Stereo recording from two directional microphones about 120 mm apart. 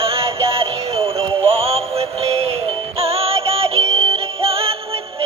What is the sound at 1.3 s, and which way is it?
Synthetic singing, 55° right (ahead or behind).